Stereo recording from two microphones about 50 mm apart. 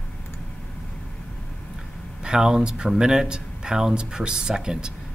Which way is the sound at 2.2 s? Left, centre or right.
Centre.